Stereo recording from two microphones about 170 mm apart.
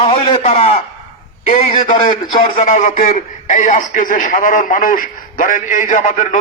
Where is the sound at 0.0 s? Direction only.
35° left (ahead or behind).